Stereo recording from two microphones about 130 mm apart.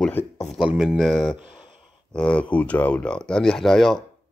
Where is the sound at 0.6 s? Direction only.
5° right (ahead or behind).